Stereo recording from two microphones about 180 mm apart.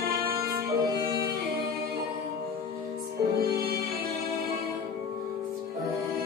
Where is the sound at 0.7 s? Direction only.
20° right (ahead or behind).